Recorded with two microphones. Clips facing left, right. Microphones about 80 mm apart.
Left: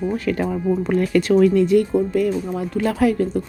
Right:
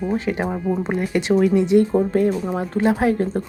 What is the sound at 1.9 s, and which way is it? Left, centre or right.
Speech, right.